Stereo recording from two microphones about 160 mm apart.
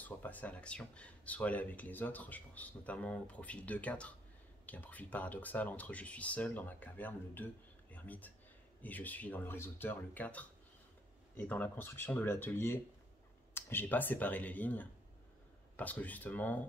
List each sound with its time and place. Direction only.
0.0 s speech: 10° left (ahead or behind)